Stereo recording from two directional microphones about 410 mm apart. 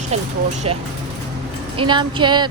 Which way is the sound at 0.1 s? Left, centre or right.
Centre.